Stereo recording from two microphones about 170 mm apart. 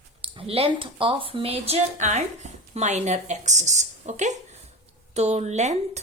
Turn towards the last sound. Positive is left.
turn(degrees=-40)  # may be behind; listen again after turning